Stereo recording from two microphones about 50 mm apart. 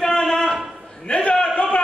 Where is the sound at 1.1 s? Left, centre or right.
Left.